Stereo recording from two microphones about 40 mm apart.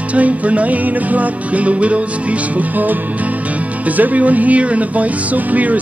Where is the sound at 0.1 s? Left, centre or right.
Right.